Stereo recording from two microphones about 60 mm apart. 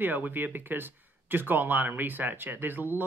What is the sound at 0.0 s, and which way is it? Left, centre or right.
Speech, right.